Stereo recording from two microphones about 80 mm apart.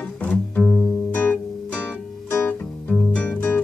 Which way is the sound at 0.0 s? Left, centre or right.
Left.